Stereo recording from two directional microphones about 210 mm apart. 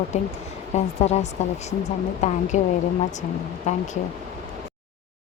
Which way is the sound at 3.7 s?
30° left (ahead or behind).